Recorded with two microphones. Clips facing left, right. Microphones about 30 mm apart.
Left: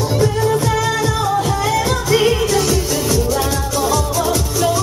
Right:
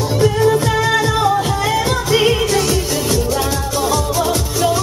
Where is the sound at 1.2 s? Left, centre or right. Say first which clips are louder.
Right 2 dB; centre.